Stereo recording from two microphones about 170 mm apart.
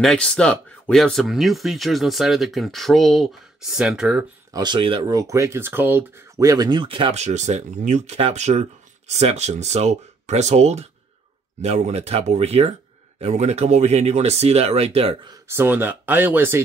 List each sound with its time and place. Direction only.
0.0 s speech: 5° left (ahead or behind)
4.5 s speech: 25° right (ahead or behind)
15.4 s speech: 15° right (ahead or behind)